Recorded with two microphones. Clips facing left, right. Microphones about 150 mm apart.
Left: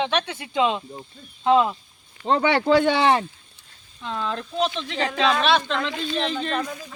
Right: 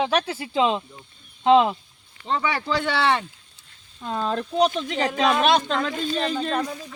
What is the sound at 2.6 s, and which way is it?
Speech, 50° left (ahead or behind).